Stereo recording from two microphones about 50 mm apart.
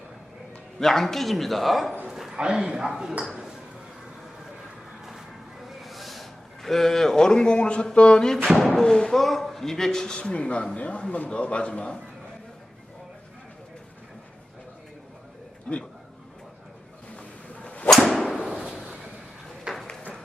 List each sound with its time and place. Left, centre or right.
0.8 s a man's voice: centre
2.0 s bow-wow: centre
2.3 s a man's voice: centre
5.6 s a sound: centre; by 7.9 s left
7.9 s speech: centre
8.4 s a man's voice: centre
8.8 s speech: centre
10.2 s a man's voice: left
15.7 s speech: centre
17.2 s whip: left
18.1 s whip: centre
19.7 s a sound: centre